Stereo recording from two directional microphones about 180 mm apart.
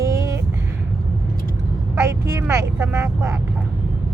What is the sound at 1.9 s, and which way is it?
Vehicle, 15° right (ahead or behind).